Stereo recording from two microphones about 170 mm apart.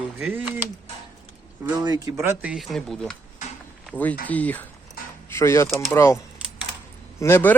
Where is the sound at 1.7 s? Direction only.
25° right (ahead or behind); by 5.6 s 15° left (ahead or behind).